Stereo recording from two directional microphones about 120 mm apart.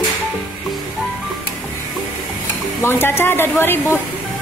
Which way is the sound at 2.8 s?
20° left (ahead or behind).